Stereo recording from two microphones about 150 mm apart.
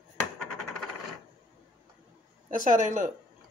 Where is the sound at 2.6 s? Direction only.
60° right (ahead or behind).